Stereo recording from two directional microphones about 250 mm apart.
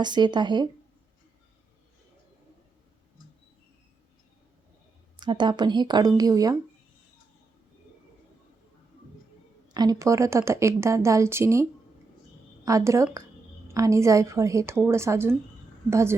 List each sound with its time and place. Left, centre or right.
0.0 s a woman's voice: centre
5.2 s a woman's voice: centre
9.7 s a woman's voice: centre
12.6 s a woman's voice: centre